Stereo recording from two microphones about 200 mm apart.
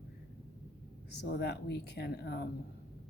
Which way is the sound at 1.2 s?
55° left (ahead or behind).